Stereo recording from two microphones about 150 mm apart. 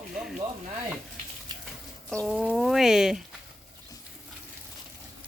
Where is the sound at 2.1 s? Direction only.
Centre (ahead or behind).